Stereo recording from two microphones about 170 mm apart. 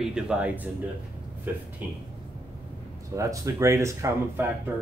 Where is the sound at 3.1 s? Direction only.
20° right (ahead or behind).